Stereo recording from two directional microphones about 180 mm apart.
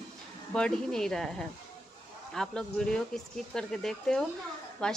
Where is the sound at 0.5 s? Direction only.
5° left (ahead or behind).